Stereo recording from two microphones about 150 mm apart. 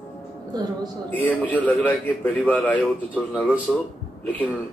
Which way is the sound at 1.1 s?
10° left (ahead or behind).